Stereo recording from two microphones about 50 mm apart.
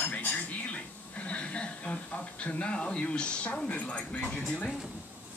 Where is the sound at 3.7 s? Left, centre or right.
Left.